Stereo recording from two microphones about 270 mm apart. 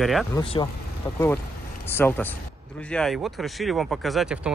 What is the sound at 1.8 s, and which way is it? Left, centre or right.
Speech, centre.